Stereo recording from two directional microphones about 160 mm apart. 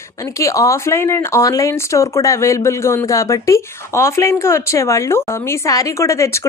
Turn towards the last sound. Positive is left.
turn(degrees=20)  # may be behind; listen again after turning